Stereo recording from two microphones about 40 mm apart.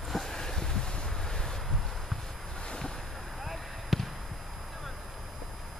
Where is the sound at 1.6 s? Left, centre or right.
Centre.